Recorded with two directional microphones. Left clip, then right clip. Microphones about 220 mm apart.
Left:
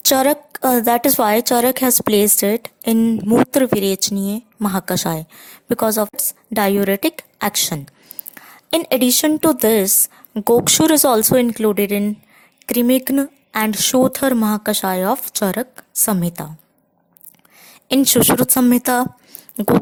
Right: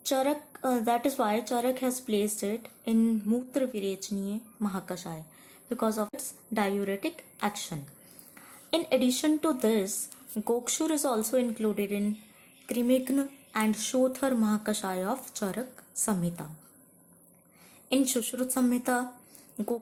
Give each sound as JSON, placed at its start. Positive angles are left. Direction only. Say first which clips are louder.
{"t": 0.0, "sound": "a woman's voice", "louder": "left 13 dB", "side_deg": 45}
{"t": 17.8, "sound": "a woman's voice", "louder": "left 14 dB", "side_deg": 45}